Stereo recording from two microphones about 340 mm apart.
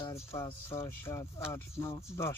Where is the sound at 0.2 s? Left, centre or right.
Centre.